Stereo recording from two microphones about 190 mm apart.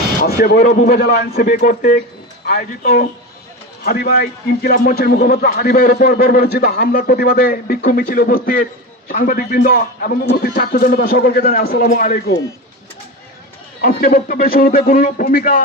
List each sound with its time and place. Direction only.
0.2 s a man's voice: 50° left (ahead or behind)
2.5 s a man's voice: 55° left (ahead or behind)
13.8 s a man's voice: 50° left (ahead or behind)